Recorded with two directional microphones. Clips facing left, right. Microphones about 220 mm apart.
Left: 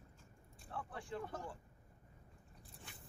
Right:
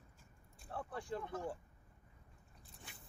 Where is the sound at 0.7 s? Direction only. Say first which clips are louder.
Right 3 dB; 40° right (ahead or behind).